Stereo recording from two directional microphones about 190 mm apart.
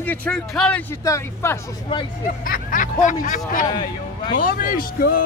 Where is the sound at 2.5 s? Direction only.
45° left (ahead or behind).